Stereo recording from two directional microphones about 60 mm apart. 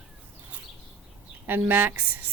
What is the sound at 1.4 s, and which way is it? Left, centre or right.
Speech, right.